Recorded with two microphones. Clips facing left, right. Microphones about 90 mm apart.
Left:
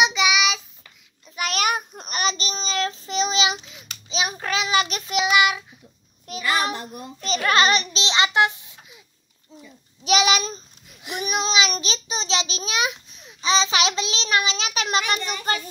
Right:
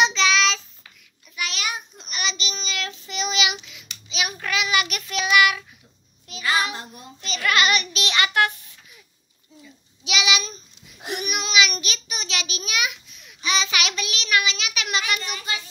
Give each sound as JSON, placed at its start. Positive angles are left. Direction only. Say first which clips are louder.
{"t": 0.0, "sound": "child singing", "louder": "even", "side_deg": 10}
{"t": 1.3, "sound": "child singing", "louder": "left 6 dB", "side_deg": 45}
{"t": 6.2, "sound": "child singing", "louder": "even", "side_deg": 40}
{"t": 7.2, "sound": "a sound", "louder": "left 3 dB", "side_deg": 35}
{"t": 10.0, "sound": "a sound", "louder": "left 5 dB", "side_deg": 40}
{"t": 11.1, "sound": "child singing", "louder": "left 1 dB", "side_deg": 35}